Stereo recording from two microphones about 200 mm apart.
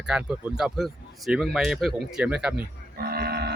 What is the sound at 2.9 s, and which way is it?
Livestock, 50° right (ahead or behind).